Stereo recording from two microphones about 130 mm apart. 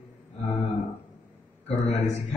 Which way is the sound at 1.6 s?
60° left (ahead or behind).